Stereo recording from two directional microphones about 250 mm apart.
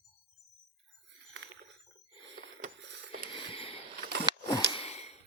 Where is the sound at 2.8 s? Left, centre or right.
Right.